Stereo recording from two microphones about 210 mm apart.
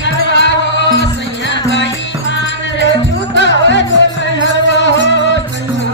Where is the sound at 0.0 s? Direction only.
55° left (ahead or behind).